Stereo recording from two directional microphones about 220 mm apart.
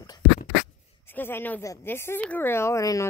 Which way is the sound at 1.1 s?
10° left (ahead or behind).